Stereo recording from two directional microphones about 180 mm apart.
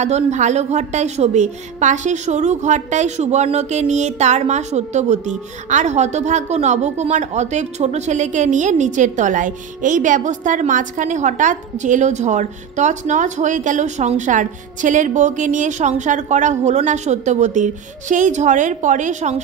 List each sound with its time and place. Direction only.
0.0 s a woman's voice: 40° right (ahead or behind)